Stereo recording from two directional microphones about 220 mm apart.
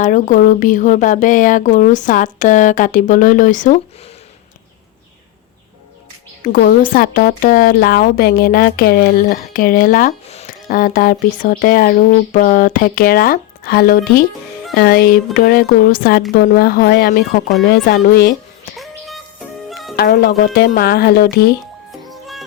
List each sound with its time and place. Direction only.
0.0 s speech: 35° left (ahead or behind)
6.4 s speech: 40° left (ahead or behind)
18.8 s music: centre (ahead or behind)
20.0 s speech: 45° left (ahead or behind)